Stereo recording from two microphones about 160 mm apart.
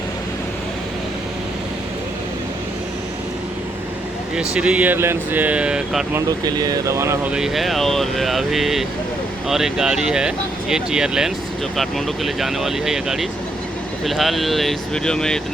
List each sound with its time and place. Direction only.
4.4 s speech: 5° right (ahead or behind)
6.1 s speech: 25° right (ahead or behind)
7.3 s speech: centre (ahead or behind)